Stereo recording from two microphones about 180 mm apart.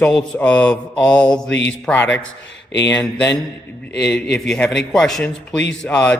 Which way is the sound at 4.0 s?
70° left (ahead or behind).